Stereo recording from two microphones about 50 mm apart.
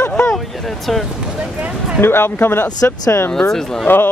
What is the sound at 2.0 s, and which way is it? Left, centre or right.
Speech, left.